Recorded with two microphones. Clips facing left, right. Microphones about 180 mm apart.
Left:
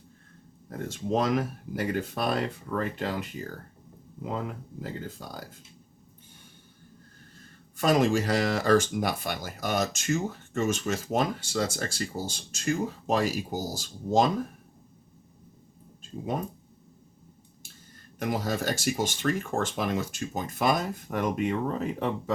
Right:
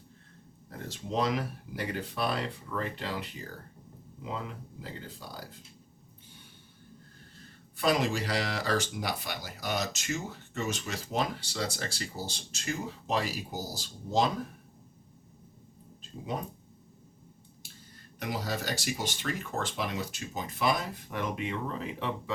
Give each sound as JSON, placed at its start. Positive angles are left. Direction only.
{"t": 0.7, "sound": "speech", "side_deg": 50}
{"t": 7.3, "sound": "speech", "side_deg": 45}
{"t": 18.2, "sound": "speech", "side_deg": 50}